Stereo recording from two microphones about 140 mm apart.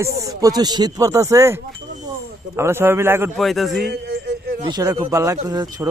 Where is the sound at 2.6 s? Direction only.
15° right (ahead or behind).